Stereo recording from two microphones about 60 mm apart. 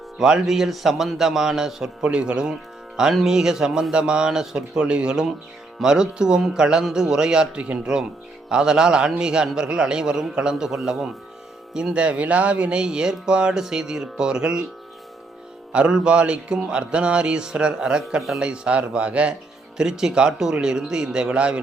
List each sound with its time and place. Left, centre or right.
0.2 s a man's voice: centre
15.7 s speech: centre